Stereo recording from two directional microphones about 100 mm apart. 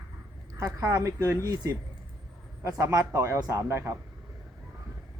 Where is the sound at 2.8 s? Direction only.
35° right (ahead or behind).